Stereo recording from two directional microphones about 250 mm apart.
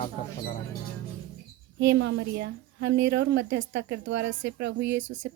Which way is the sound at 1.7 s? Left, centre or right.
Right.